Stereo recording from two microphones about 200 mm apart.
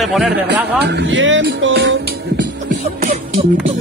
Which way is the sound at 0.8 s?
60° right (ahead or behind).